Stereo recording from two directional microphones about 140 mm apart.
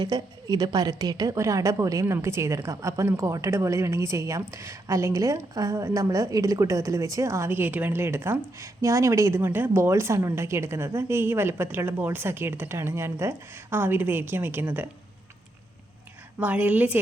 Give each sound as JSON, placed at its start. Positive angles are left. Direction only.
{"t": 0.0, "sound": "a woman's voice", "side_deg": -30}
{"t": 16.4, "sound": "a woman's voice", "side_deg": -10}